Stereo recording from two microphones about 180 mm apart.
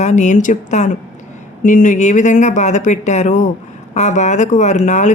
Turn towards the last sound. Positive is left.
turn(degrees=40)  # may be behind; listen again after turning